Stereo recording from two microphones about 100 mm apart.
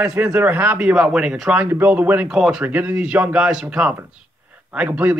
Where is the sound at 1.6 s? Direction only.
20° right (ahead or behind).